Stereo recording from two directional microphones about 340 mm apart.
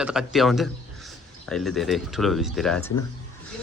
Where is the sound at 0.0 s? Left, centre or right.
Centre.